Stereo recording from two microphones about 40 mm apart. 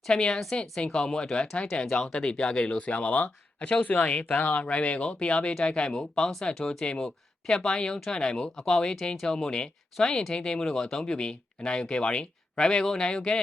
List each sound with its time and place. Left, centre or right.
0.1 s speech: left
3.8 s speech: left; by 6.8 s centre
6.8 s speech: left